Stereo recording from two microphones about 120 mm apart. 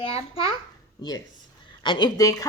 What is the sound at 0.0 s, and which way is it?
Speech, 55° left (ahead or behind).